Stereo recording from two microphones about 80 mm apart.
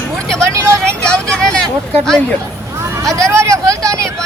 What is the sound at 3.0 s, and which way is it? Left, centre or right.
Speech, right.